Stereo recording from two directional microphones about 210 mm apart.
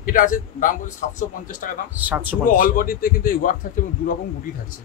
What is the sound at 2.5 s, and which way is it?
A man's voice, 40° left (ahead or behind).